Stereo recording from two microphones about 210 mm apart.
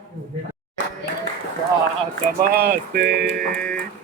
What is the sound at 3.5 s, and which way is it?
Speech, 5° left (ahead or behind).